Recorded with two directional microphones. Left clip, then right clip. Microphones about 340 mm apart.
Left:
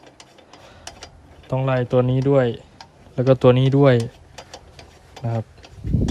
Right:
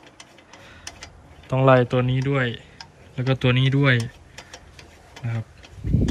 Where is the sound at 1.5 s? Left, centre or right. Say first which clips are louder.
Right 4 dB; centre.